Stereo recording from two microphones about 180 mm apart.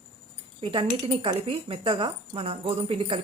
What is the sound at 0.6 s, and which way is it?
Speech, 30° right (ahead or behind).